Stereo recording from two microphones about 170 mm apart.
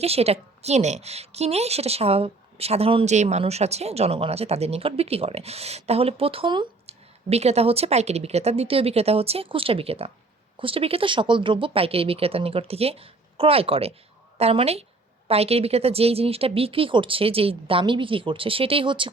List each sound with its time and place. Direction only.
0.0 s a woman's voice: 35° right (ahead or behind)